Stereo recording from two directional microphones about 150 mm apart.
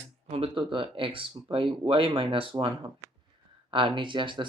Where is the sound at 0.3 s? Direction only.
40° right (ahead or behind).